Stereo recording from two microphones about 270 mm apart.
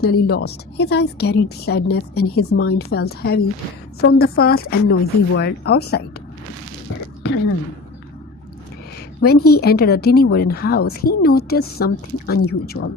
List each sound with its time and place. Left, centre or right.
0.0 s a woman's voice: left
9.2 s a woman's voice: left